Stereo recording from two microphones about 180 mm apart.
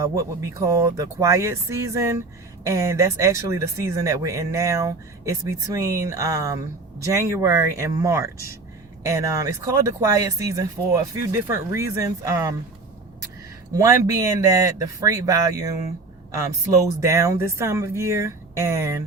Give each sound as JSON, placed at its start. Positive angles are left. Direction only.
{"t": 0.0, "sound": "speech", "side_deg": -15}
{"t": 13.7, "sound": "speech", "side_deg": -20}